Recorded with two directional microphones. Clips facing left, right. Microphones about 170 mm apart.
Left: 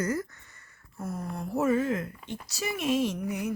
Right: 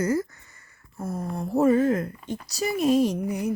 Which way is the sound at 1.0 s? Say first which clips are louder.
Right 4 dB; 25° right (ahead or behind).